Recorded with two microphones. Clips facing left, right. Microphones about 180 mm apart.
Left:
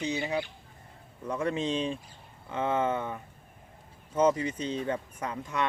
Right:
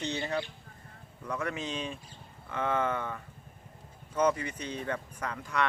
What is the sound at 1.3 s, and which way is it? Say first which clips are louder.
Speech: left 5 dB; 25° left (ahead or behind).